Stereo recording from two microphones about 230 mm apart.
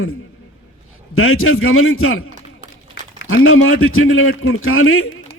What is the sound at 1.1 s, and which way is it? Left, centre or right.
A man's voice, left.